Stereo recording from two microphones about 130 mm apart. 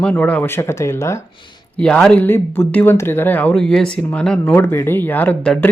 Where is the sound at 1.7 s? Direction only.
5° left (ahead or behind).